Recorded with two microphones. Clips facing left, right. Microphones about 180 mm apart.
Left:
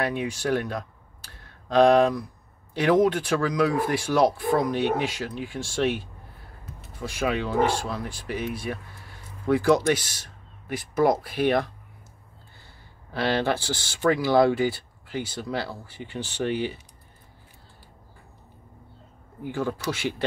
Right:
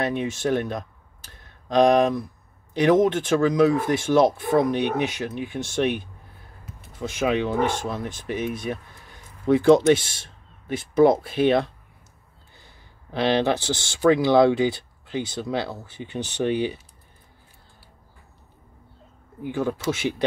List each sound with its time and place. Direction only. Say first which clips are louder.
0.0 s speech: right 2 dB; 20° right (ahead or behind)
19.4 s speech: right 3 dB; 20° right (ahead or behind)